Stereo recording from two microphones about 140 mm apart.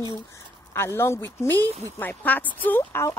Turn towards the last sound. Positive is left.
turn(degrees=20)  # may be behind; listen again after turning